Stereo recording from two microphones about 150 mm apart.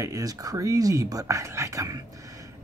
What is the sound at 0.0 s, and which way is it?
Speech, 25° right (ahead or behind).